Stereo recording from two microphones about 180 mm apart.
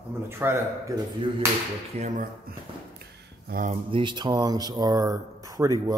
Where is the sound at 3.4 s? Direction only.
50° right (ahead or behind).